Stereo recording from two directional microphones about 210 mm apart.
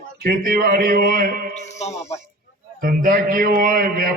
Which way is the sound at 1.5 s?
35° left (ahead or behind).